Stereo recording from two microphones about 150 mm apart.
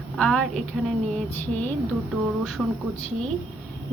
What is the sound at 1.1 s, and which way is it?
Speech, 10° left (ahead or behind).